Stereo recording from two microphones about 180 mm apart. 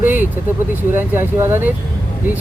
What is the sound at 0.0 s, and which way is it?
Vehicle, 10° right (ahead or behind).